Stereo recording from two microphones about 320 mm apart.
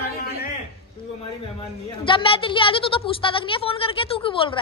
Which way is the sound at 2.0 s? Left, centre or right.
Centre.